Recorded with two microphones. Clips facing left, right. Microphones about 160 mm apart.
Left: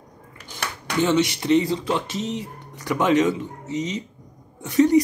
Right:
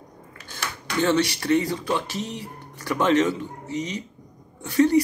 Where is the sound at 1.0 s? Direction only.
15° left (ahead or behind).